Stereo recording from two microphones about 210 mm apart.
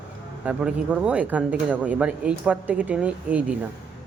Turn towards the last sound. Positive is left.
turn(degrees=-5)  # may be behind; listen again after turning